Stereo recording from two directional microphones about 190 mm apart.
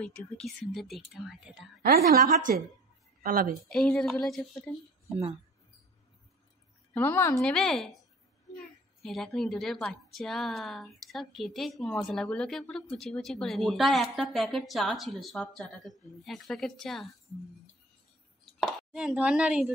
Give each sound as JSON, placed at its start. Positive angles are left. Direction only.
{"t": 0.0, "sound": "a woman's voice", "side_deg": 10}
{"t": 1.8, "sound": "a woman's voice", "side_deg": -50}
{"t": 3.7, "sound": "a woman's voice", "side_deg": 5}
{"t": 6.9, "sound": "a woman's voice", "side_deg": 10}
{"t": 9.0, "sound": "a woman's voice", "side_deg": 0}
{"t": 18.6, "sound": "speech", "side_deg": 0}